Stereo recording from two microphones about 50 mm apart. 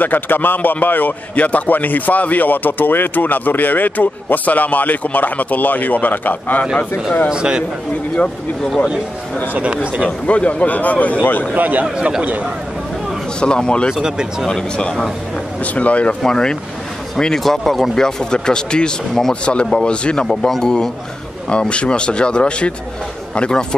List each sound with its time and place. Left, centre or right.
0.0 s a man's voice: left
7.2 s a man's voice: centre
9.5 s speech: right
10.2 s a man's voice: left
11.5 s a man's voice: right
13.4 s speech: centre
13.9 s a man's voice: centre
15.6 s speech: left
16.3 s speech: centre
17.4 s speech: centre; by 20.2 s left
20.2 s speech: centre
21.5 s speech: left